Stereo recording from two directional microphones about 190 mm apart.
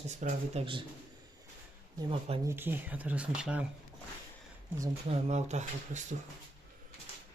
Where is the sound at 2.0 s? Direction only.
30° right (ahead or behind).